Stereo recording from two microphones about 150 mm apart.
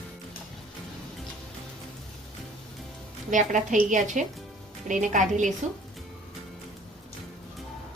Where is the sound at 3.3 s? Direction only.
55° right (ahead or behind).